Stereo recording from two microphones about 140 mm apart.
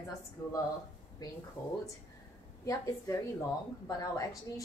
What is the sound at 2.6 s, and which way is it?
A woman's voice, 20° left (ahead or behind).